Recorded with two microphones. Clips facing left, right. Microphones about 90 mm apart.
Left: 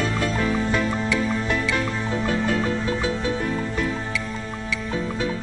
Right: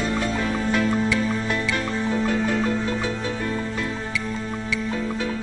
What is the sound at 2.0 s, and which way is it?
Music, 10° left (ahead or behind).